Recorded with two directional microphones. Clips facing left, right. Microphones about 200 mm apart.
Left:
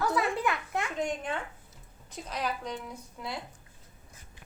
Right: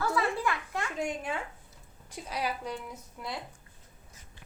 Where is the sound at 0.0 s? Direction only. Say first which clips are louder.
Left 1 dB; 20° left (ahead or behind).